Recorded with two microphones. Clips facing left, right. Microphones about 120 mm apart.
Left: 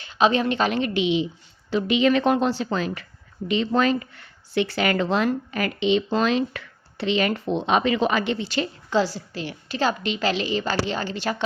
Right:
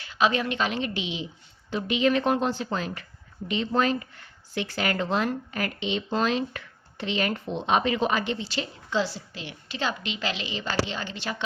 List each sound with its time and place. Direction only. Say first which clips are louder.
0.0 s a woman's voice: left 4 dB; 25° left (ahead or behind)
0.7 s a woman's voice: left 8 dB; 65° left (ahead or behind)
1.7 s a woman's voice: left 4 dB; 90° left; by 11.4 s 45° left (ahead or behind)